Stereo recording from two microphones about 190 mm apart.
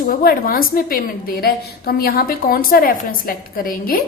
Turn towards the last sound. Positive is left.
turn(degrees=50)  # may be behind; listen again after turning